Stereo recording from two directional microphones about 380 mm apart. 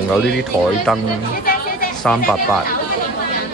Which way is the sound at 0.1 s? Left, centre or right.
Centre.